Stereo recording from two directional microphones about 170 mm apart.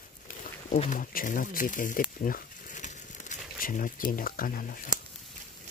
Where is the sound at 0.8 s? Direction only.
50° left (ahead or behind).